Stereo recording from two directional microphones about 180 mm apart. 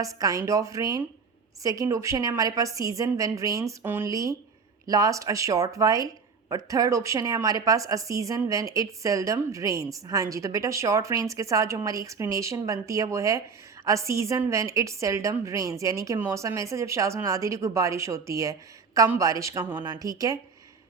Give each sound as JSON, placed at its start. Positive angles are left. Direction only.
{"t": 0.0, "sound": "a woman's voice", "side_deg": -20}